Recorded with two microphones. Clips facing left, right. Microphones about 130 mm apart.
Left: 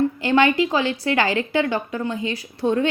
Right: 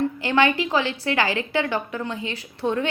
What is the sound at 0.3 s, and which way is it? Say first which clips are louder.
A woman's voice: left 3 dB; 45° left (ahead or behind).